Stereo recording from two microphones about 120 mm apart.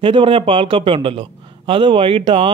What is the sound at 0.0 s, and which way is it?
Speech, 45° right (ahead or behind).